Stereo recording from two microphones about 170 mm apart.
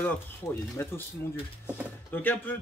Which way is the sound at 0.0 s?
10° left (ahead or behind).